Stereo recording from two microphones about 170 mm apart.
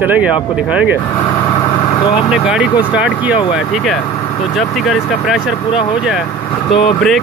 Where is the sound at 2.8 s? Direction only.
5° right (ahead or behind).